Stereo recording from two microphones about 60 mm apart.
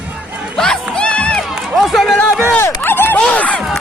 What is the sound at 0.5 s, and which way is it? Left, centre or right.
Music, centre.